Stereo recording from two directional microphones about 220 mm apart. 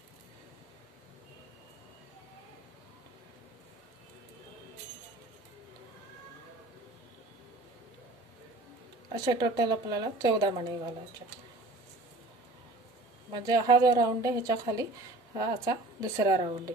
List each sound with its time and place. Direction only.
9.1 s speech: 20° right (ahead or behind)
13.3 s a woman's voice: 20° right (ahead or behind)